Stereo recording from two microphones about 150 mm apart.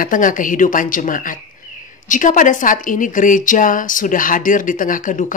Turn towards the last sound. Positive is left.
turn(degrees=60)  # may be behind; listen again after turning